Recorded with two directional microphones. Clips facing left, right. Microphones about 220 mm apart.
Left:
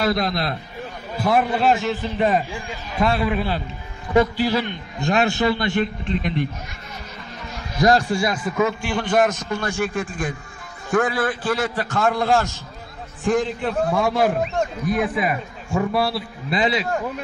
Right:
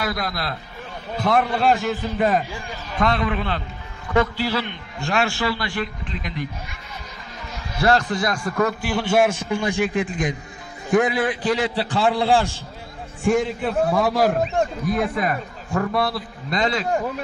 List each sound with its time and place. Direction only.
0.0 s a man's voice: 25° left (ahead or behind)
1.1 s a man's voice: 5° left (ahead or behind); by 6.3 s 25° left (ahead or behind)
7.8 s a man's voice: 15° left (ahead or behind)